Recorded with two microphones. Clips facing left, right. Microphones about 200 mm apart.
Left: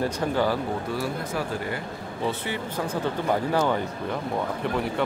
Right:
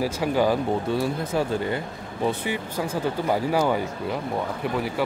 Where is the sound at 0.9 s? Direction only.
25° right (ahead or behind).